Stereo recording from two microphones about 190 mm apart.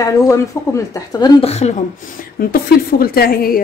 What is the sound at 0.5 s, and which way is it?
Speech, 15° left (ahead or behind).